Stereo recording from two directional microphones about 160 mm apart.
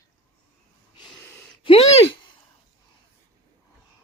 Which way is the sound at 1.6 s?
40° left (ahead or behind).